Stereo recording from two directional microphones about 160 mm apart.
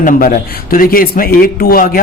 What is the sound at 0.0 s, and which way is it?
Speech, 60° left (ahead or behind).